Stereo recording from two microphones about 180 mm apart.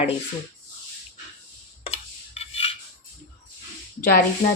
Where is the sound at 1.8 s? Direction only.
35° left (ahead or behind).